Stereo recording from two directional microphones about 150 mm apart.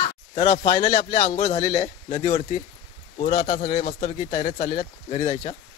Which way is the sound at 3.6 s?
60° left (ahead or behind).